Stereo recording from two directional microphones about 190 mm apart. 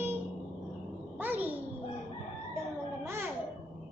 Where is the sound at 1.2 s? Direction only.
10° right (ahead or behind).